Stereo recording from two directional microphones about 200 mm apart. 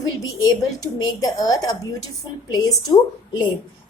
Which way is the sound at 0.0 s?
20° left (ahead or behind).